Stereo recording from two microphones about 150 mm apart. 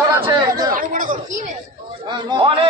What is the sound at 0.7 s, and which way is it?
Chatter, 65° right (ahead or behind).